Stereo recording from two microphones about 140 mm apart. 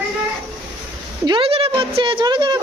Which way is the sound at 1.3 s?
40° right (ahead or behind).